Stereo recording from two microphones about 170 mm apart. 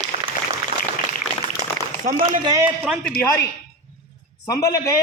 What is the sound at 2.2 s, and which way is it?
Speech, 25° right (ahead or behind).